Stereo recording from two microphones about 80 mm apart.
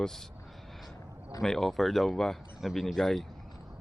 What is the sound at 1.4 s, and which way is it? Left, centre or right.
Speech, centre.